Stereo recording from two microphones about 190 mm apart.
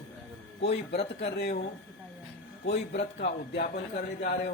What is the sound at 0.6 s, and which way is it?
Speech, 60° left (ahead or behind).